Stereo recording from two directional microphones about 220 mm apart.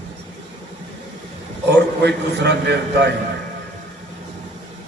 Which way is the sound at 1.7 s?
50° right (ahead or behind).